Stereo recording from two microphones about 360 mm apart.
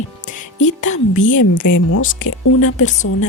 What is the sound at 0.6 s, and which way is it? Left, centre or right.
Speech, centre.